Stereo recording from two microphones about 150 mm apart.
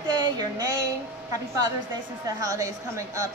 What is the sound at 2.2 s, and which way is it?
Speech, 20° right (ahead or behind).